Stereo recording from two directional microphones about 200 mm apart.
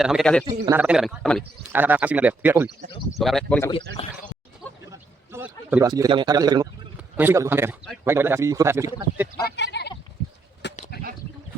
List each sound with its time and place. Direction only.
0.0 s speech: centre (ahead or behind)
0.4 s a man's voice: 20° right (ahead or behind)
0.8 s a man's voice: 5° right (ahead or behind)
4.9 s a sound: 10° right (ahead or behind)
5.9 s a man's voice: 20° right (ahead or behind)
9.7 s goat: 55° left (ahead or behind)
10.6 s bird: 60° left (ahead or behind)